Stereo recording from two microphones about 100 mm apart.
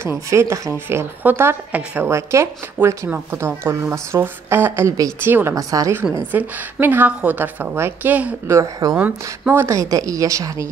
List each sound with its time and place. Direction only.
0.0 s a woman's voice: 25° right (ahead or behind)
6.3 s a woman's voice: 20° right (ahead or behind)
8.9 s a woman's voice: 10° right (ahead or behind)
9.5 s speech: 20° right (ahead or behind)
9.8 s a woman's voice: 35° right (ahead or behind)